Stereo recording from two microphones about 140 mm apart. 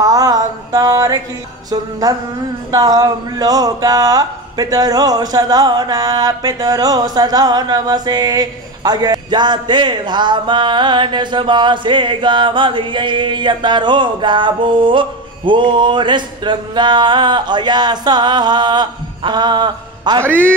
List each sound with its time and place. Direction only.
0.0 s a sound: 25° right (ahead or behind)
1.7 s music: 25° right (ahead or behind)
2.7 s speech: 25° right (ahead or behind)